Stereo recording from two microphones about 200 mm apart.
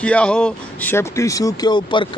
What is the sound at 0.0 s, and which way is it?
A man's voice, 5° left (ahead or behind).